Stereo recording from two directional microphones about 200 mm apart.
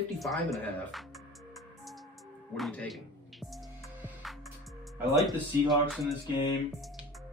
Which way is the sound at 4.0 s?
Centre (ahead or behind).